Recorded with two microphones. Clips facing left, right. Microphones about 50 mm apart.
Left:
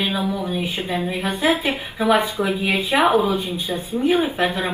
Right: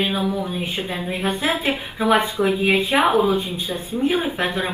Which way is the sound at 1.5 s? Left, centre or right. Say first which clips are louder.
Left 1 dB; right.